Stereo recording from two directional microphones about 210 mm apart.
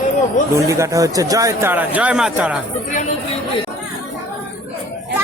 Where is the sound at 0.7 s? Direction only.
15° right (ahead or behind).